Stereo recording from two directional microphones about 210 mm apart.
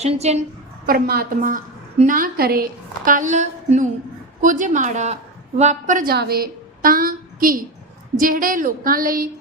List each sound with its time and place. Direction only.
0.0 s a woman's voice: 30° right (ahead or behind)
0.9 s a woman's voice: 45° right (ahead or behind)